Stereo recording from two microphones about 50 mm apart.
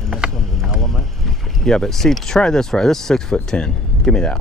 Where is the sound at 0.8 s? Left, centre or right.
Centre.